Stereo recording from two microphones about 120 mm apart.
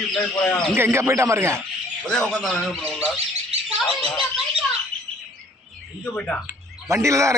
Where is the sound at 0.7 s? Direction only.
20° right (ahead or behind).